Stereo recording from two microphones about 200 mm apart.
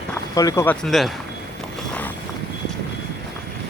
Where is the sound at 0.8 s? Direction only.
Centre (ahead or behind).